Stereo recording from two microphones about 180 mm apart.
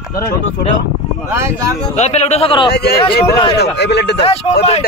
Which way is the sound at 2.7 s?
65° left (ahead or behind).